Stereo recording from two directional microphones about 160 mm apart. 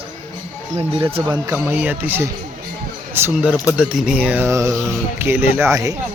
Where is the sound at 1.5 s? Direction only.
10° right (ahead or behind).